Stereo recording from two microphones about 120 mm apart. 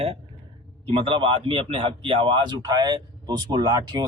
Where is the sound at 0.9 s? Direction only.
45° right (ahead or behind).